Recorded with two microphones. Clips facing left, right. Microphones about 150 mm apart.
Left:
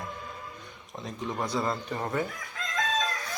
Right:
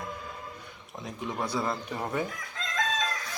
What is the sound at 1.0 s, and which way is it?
A man's voice, 15° right (ahead or behind).